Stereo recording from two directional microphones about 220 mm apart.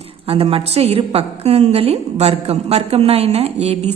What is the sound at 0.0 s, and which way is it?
A woman's voice, 25° right (ahead or behind).